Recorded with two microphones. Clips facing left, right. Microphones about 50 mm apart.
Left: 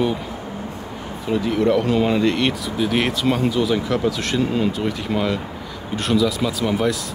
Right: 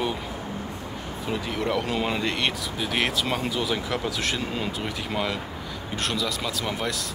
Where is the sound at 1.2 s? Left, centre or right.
Centre.